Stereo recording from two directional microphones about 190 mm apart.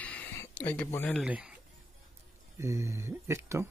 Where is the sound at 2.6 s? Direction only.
15° right (ahead or behind).